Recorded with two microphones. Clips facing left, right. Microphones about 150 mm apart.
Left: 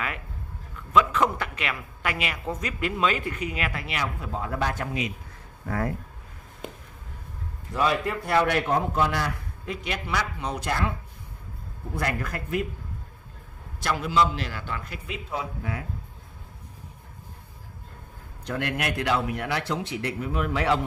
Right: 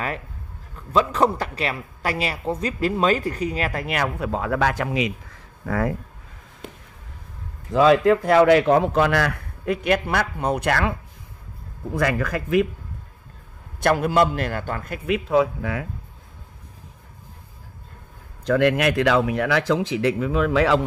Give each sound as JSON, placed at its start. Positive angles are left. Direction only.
{"t": 0.7, "sound": "a woman's voice", "side_deg": -35}
{"t": 4.2, "sound": "speech", "side_deg": -90}
{"t": 7.7, "sound": "a man's voice", "side_deg": -90}
{"t": 11.9, "sound": "speech", "side_deg": -90}
{"t": 13.7, "sound": "a man's voice", "side_deg": -55}
{"t": 15.0, "sound": "speech", "side_deg": -80}
{"t": 18.5, "sound": "speech", "side_deg": -90}